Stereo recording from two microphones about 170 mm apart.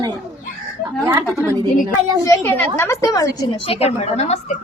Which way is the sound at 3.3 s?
35° left (ahead or behind).